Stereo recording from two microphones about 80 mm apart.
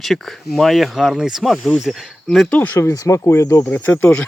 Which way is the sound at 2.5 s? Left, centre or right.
Centre.